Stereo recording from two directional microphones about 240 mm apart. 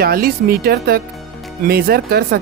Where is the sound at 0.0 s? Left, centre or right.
Right.